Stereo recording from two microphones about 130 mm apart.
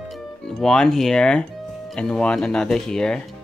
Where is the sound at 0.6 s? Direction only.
5° left (ahead or behind).